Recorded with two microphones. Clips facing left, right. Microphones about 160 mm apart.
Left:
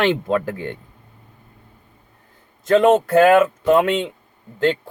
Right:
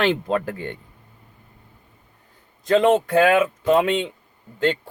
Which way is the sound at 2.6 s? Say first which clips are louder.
Left 3 dB; 50° left (ahead or behind).